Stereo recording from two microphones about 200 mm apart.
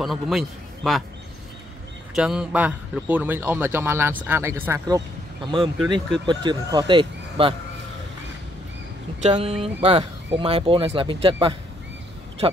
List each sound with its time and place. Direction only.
0.0 s a man's voice: centre (ahead or behind)
2.1 s a man's voice: 5° right (ahead or behind); by 7.5 s 25° right (ahead or behind)
9.2 s speech: 30° right (ahead or behind)